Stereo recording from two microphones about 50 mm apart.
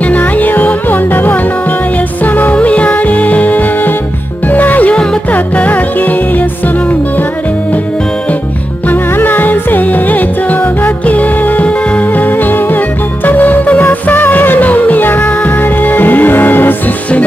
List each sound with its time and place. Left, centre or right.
0.0 s music: left
8.8 s music: left